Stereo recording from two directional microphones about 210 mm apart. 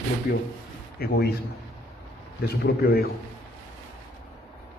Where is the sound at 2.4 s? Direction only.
50° left (ahead or behind).